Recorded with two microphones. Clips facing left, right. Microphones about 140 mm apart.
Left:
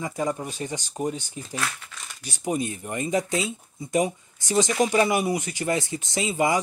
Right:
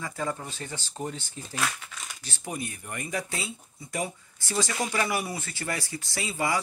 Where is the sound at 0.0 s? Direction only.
15° left (ahead or behind).